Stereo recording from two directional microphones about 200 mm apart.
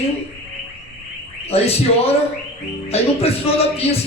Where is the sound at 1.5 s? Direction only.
30° left (ahead or behind).